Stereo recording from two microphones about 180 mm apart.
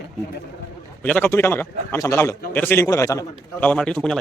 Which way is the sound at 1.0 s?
10° left (ahead or behind).